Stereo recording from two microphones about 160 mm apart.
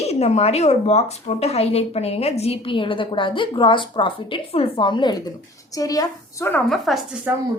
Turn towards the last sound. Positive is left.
turn(degrees=-10)  # may be behind; listen again after turning